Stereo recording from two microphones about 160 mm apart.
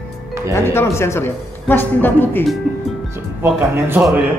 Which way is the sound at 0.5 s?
15° left (ahead or behind).